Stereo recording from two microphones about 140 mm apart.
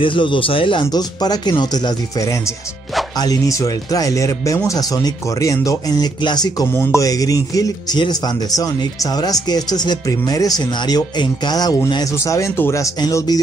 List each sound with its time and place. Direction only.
0.0 s speech: 35° left (ahead or behind)